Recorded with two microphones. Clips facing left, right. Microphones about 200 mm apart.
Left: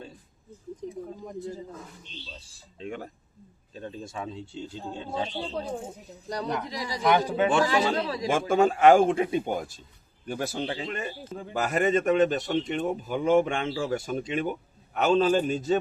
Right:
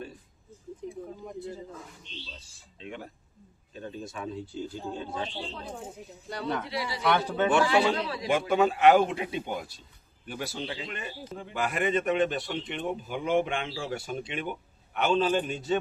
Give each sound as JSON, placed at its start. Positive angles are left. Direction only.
{"t": 2.7, "sound": "a man's voice", "side_deg": 45}
{"t": 3.8, "sound": "speech", "side_deg": 30}
{"t": 5.3, "sound": "a man's voice", "side_deg": 40}